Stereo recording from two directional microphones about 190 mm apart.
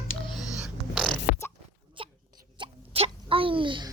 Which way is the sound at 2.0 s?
25° right (ahead or behind).